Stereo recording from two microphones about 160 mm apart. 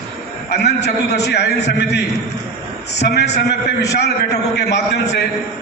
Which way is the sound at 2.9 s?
90° left.